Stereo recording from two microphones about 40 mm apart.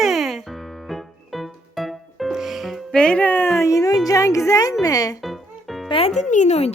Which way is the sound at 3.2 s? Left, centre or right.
Left.